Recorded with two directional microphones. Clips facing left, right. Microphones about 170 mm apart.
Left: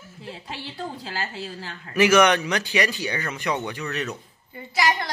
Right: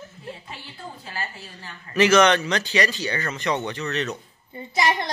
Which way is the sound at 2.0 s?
10° left (ahead or behind).